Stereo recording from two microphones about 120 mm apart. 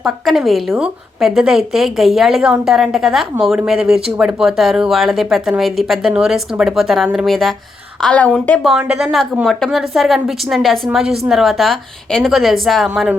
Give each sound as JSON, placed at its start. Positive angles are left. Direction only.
{"t": 0.0, "sound": "a woman's voice", "side_deg": 0}
{"t": 8.9, "sound": "speech", "side_deg": -5}